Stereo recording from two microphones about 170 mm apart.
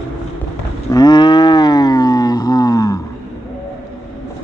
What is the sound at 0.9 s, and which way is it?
Livestock, 25° left (ahead or behind).